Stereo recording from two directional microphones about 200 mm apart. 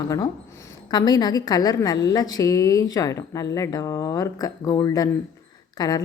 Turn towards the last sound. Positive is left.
turn(degrees=20)  # may be behind; listen again after turning